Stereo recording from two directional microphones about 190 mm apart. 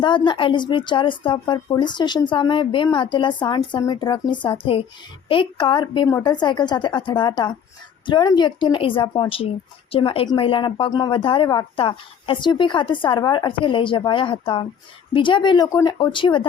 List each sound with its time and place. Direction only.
0.0 s speech: 25° left (ahead or behind)